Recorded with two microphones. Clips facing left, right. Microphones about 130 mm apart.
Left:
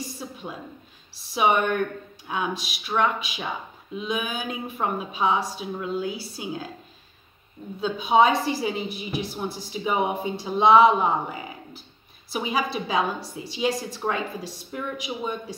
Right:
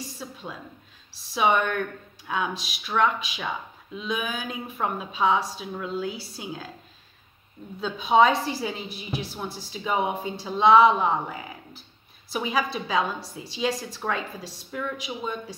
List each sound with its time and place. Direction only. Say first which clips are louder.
0.2 s a sound: left 2 dB; 15° left (ahead or behind)
1.3 s a woman's voice: left 1 dB; 15° left (ahead or behind)
7.8 s a woman's voice: even; 10° left (ahead or behind)
12.3 s a woman's voice: even; 10° left (ahead or behind)